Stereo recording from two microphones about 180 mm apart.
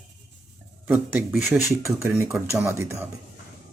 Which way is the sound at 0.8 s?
10° right (ahead or behind).